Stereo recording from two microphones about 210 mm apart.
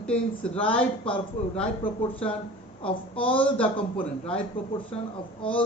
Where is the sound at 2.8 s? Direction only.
25° left (ahead or behind).